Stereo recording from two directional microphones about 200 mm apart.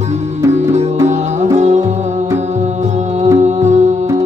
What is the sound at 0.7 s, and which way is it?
Music, 35° right (ahead or behind).